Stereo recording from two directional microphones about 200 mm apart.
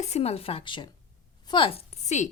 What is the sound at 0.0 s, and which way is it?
A woman's voice, 30° left (ahead or behind).